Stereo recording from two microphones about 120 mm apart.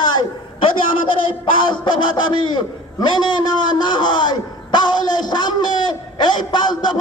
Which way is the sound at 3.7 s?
40° left (ahead or behind).